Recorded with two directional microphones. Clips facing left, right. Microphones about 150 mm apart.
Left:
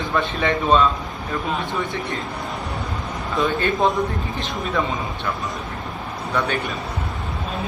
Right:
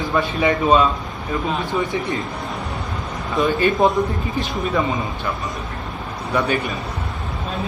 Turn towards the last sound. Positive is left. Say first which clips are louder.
# right 3 dB
turn(degrees=-5)  # may be behind; listen again after turning